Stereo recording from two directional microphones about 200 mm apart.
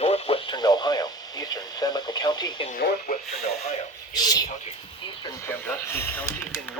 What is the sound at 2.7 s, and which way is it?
Speech, 50° left (ahead or behind).